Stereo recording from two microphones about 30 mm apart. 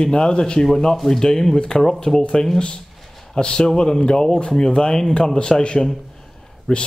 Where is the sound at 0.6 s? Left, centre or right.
Centre.